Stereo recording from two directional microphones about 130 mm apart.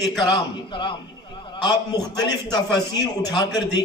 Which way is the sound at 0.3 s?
40° left (ahead or behind).